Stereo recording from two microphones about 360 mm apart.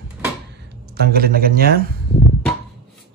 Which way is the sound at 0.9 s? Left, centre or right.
Right.